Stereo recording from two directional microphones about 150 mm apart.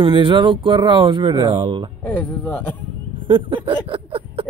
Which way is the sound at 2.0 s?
10° left (ahead or behind).